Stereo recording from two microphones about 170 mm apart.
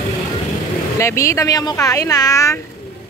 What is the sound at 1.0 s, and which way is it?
A woman's voice, 15° left (ahead or behind).